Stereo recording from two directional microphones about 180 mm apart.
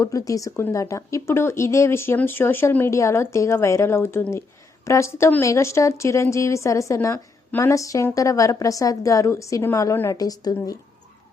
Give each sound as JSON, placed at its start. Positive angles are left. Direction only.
{"t": 0.0, "sound": "a woman's voice", "side_deg": 20}